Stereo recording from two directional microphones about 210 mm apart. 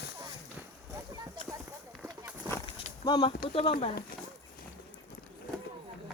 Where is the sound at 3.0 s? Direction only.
20° left (ahead or behind).